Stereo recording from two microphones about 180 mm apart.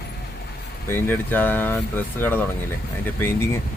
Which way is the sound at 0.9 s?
10° left (ahead or behind).